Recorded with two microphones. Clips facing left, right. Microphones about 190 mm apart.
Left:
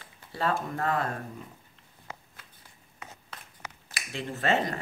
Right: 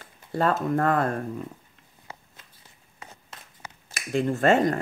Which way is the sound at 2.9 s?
35° right (ahead or behind).